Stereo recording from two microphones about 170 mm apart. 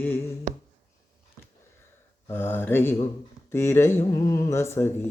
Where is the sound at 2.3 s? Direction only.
15° left (ahead or behind).